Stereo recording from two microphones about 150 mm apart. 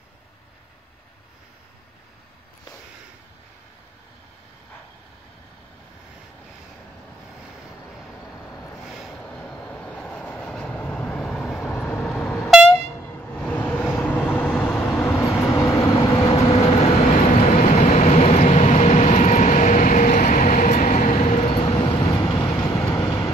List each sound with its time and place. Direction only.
8.8 s vehicle: centre (ahead or behind)
12.4 s train: centre (ahead or behind)
12.6 s vehicle: 15° left (ahead or behind)
15.1 s train: 20° left (ahead or behind)
15.9 s vehicle: 40° left (ahead or behind); by 23.3 s 25° left (ahead or behind)